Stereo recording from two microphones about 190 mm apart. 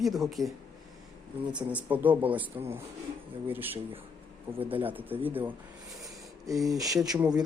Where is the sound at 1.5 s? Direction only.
10° right (ahead or behind).